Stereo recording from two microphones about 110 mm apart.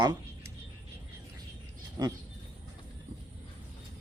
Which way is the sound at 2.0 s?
40° right (ahead or behind).